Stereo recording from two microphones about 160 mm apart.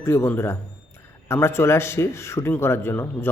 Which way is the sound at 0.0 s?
15° left (ahead or behind).